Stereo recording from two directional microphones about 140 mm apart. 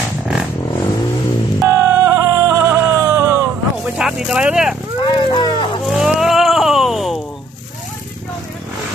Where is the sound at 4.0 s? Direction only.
5° right (ahead or behind).